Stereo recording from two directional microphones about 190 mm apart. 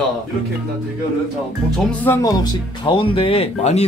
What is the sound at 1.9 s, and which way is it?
Speech, 10° left (ahead or behind).